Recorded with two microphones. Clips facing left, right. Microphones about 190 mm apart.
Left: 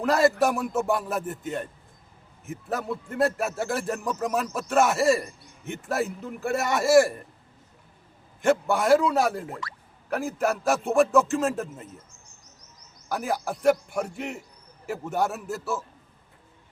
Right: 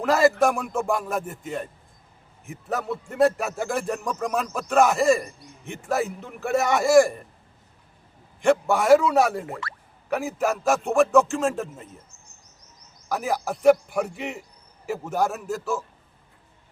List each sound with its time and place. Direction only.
0.0 s speech: centre (ahead or behind)
8.4 s speech: centre (ahead or behind)
9.5 s speech: 70° right (ahead or behind)
10.2 s speech: centre (ahead or behind)
13.1 s speech: centre (ahead or behind)